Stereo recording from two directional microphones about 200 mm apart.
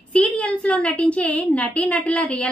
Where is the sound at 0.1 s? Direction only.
5° left (ahead or behind).